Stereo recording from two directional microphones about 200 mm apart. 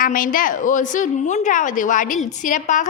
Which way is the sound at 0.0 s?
45° left (ahead or behind).